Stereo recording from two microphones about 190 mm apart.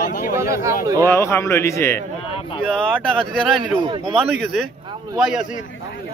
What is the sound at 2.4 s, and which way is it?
Speech, 30° left (ahead or behind).